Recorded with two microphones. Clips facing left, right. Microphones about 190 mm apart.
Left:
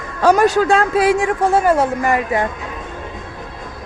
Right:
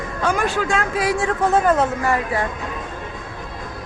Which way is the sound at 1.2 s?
10° left (ahead or behind).